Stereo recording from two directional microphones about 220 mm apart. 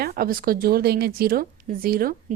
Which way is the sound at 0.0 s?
45° right (ahead or behind).